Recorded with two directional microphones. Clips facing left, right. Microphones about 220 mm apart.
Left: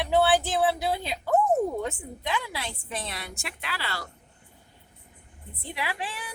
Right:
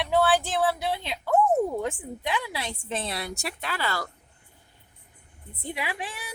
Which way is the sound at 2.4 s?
20° right (ahead or behind).